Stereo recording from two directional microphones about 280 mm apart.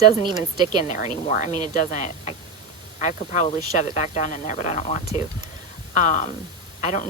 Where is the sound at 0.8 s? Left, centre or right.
Left.